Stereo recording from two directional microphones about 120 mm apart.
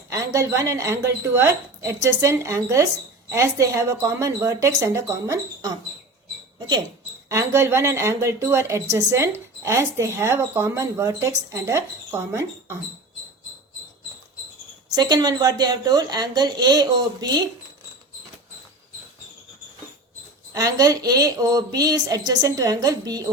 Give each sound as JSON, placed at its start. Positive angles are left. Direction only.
{"t": 0.1, "sound": "speech", "side_deg": -25}
{"t": 7.3, "sound": "speech", "side_deg": -25}
{"t": 14.9, "sound": "speech", "side_deg": -35}
{"t": 20.5, "sound": "speech", "side_deg": -30}